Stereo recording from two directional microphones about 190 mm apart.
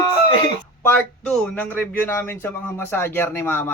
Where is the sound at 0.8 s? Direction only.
5° left (ahead or behind).